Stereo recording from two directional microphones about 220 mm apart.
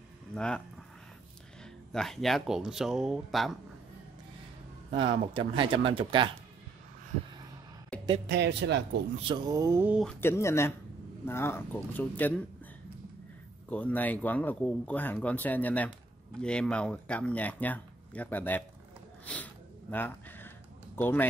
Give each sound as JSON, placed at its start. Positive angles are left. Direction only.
{"t": 0.3, "sound": "speech", "side_deg": 5}
{"t": 1.6, "sound": "speech", "side_deg": 5}
{"t": 5.0, "sound": "speech", "side_deg": -20}
{"t": 7.9, "sound": "a sound", "side_deg": 5}
{"t": 8.3, "sound": "a man's voice", "side_deg": -50}
{"t": 9.2, "sound": "a sound", "side_deg": -20}
{"t": 10.0, "sound": "speech", "side_deg": 10}
{"t": 13.7, "sound": "speech", "side_deg": 5}
{"t": 19.2, "sound": "a sound", "side_deg": 5}